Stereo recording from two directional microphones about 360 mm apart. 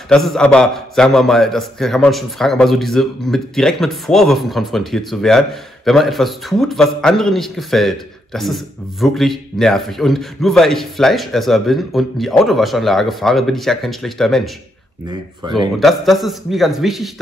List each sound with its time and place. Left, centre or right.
0.1 s a man's voice: centre
15.0 s speech: centre
15.8 s a man's voice: centre